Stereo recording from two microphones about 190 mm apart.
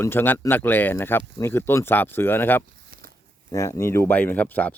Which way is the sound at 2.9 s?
45° right (ahead or behind).